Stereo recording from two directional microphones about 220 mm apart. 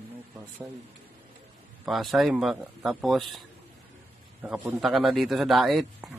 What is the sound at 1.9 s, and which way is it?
Speech, centre (ahead or behind).